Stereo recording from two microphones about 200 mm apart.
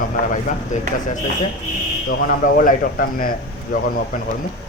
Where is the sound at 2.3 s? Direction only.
45° left (ahead or behind).